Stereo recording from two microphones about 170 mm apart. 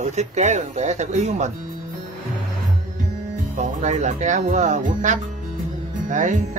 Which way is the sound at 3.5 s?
45° right (ahead or behind).